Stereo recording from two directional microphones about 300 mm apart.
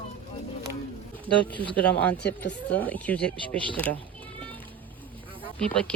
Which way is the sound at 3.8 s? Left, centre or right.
Centre.